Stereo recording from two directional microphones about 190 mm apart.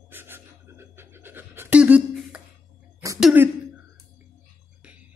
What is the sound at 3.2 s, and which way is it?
Throat clearing, centre (ahead or behind).